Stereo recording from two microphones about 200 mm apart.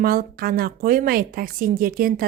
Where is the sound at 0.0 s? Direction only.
45° right (ahead or behind).